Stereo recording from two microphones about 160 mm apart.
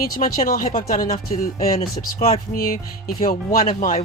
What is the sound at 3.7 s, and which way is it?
Speech, 45° left (ahead or behind).